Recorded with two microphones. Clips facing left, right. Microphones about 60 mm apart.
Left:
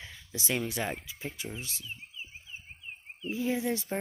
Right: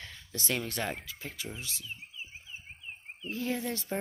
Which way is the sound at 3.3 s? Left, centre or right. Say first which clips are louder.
Left 3 dB; centre.